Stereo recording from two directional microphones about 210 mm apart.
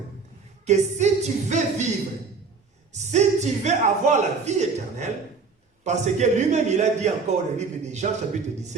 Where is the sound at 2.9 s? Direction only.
35° right (ahead or behind).